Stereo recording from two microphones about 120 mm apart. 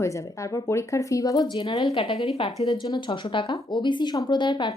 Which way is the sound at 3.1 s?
45° left (ahead or behind).